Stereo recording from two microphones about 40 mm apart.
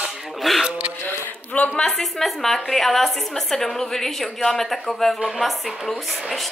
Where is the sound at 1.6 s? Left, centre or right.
Left.